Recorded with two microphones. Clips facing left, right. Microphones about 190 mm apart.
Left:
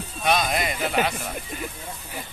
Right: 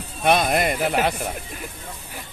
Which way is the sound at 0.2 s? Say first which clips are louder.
Right 4 dB; 55° right (ahead or behind).